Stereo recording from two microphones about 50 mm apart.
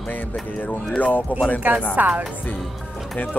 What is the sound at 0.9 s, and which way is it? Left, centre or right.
Speech, left.